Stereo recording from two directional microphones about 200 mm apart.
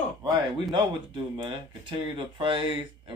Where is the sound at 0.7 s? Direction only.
25° right (ahead or behind).